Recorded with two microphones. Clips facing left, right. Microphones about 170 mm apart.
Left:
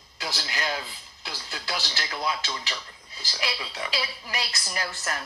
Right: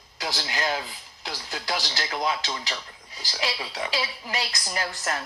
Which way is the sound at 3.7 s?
25° right (ahead or behind).